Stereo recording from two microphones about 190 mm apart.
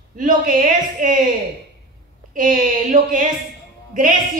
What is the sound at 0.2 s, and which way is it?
Speech, 45° right (ahead or behind).